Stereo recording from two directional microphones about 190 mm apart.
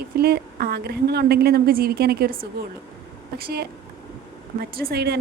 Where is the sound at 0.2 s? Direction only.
55° right (ahead or behind).